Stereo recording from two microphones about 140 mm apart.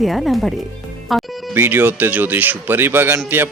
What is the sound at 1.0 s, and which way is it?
Music, centre (ahead or behind).